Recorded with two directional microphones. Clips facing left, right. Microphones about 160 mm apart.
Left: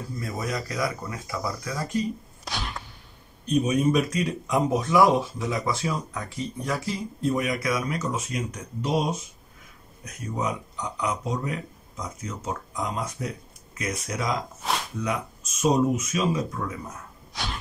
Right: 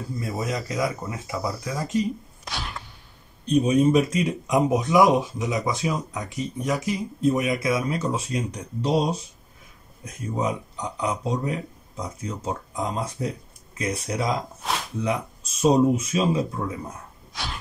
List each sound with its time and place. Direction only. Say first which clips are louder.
0.2 s speech: right 2 dB; 20° right (ahead or behind)
3.4 s speech: right 3 dB; 30° right (ahead or behind)
14.6 s a sound: even; centre (ahead or behind)
15.0 s speech: right 3 dB; 30° right (ahead or behind)